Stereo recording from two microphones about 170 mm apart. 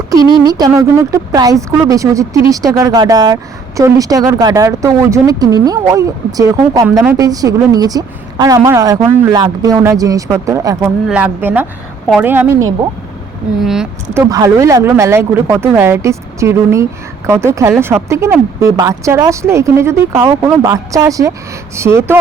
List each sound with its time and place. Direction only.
0.1 s speech: 20° right (ahead or behind)
10.8 s speech: 10° right (ahead or behind)
13.6 s speech: 5° right (ahead or behind)
14.1 s speech: 20° right (ahead or behind)